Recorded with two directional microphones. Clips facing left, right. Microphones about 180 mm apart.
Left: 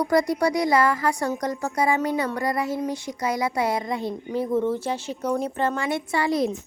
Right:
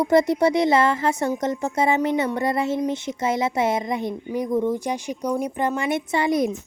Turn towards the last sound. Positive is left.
turn(degrees=-20)  # may be behind; listen again after turning